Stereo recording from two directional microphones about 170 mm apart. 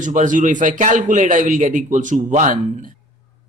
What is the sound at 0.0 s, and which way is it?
Speech, 50° right (ahead or behind).